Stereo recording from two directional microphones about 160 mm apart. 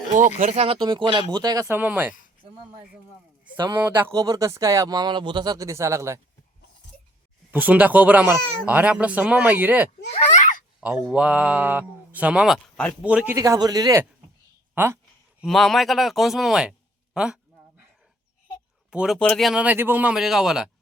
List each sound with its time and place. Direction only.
0.3 s speech: 40° right (ahead or behind)
0.8 s speech: 30° right (ahead or behind); by 2.1 s 10° right (ahead or behind)
3.8 s speech: 10° right (ahead or behind)
7.5 s speech: 10° right (ahead or behind)
10.1 s a sound: 40° left (ahead or behind)
11.1 s speech: 5° right (ahead or behind)
13.0 s speech: 5° right (ahead or behind)
13.3 s speech: 20° right (ahead or behind)
14.8 s speech: 10° right (ahead or behind)
15.4 s a man's voice: centre (ahead or behind)
18.9 s a man's voice: 5° right (ahead or behind)